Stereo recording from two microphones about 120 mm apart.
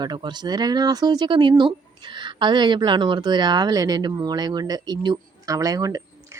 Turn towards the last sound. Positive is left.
turn(degrees=-30)  # may be behind; listen again after turning